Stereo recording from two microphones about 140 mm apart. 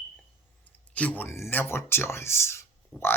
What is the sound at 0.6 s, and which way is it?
Speech, 10° left (ahead or behind).